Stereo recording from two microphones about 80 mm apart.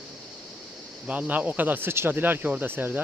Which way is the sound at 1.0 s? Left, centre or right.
Centre.